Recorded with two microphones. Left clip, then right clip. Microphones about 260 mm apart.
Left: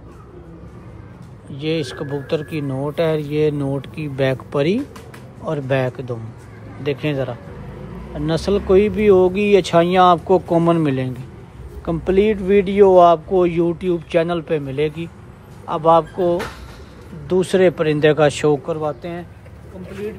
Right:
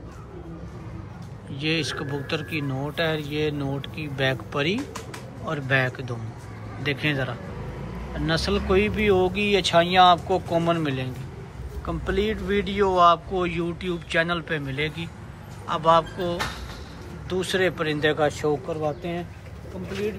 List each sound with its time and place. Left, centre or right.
1.5 s speech: centre
17.3 s speech: left